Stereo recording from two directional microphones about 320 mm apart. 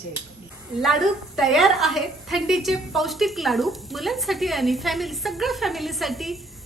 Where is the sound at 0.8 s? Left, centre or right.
Centre.